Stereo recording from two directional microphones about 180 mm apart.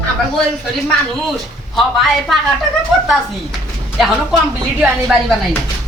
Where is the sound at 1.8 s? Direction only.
Centre (ahead or behind).